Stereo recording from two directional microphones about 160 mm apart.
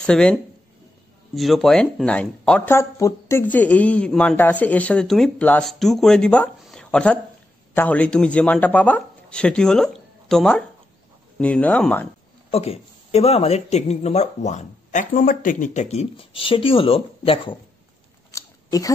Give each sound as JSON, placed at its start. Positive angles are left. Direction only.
{"t": 0.0, "sound": "speech", "side_deg": 5}
{"t": 12.4, "sound": "speech", "side_deg": 40}
{"t": 18.3, "sound": "a sound", "side_deg": 20}